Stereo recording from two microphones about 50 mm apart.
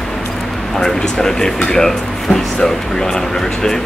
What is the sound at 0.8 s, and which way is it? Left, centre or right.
Speech, centre.